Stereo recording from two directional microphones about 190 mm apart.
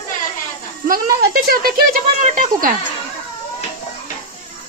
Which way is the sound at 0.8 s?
50° right (ahead or behind).